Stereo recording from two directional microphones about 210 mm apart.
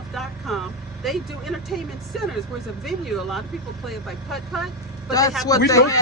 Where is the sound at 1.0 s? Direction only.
Centre (ahead or behind).